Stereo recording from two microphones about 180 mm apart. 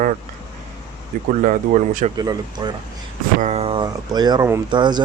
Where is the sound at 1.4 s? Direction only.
45° right (ahead or behind).